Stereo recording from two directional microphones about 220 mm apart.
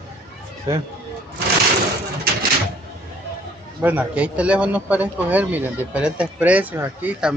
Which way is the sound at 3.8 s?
5° right (ahead or behind).